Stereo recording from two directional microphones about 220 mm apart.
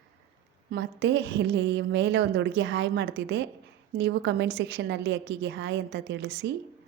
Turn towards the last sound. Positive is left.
turn(degrees=-50)  # may be behind; listen again after turning